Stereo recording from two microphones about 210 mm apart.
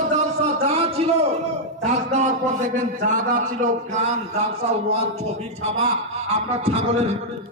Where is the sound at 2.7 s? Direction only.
35° right (ahead or behind).